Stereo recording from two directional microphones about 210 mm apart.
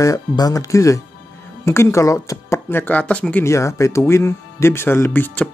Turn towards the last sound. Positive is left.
turn(degrees=10)  # may be behind; listen again after turning